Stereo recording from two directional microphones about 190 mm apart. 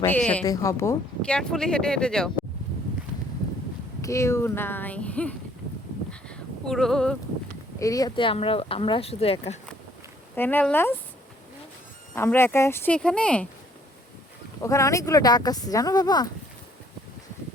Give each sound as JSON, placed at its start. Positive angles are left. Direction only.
{"t": 0.1, "sound": "speech", "side_deg": 5}
{"t": 0.4, "sound": "speech", "side_deg": 15}
{"t": 1.4, "sound": "speech", "side_deg": 5}
{"t": 4.0, "sound": "speech", "side_deg": 15}
{"t": 6.1, "sound": "a sound", "side_deg": 5}
{"t": 7.8, "sound": "speech", "side_deg": 20}
{"t": 10.3, "sound": "speech", "side_deg": 10}
{"t": 12.1, "sound": "speech", "side_deg": 10}
{"t": 14.6, "sound": "speech", "side_deg": 15}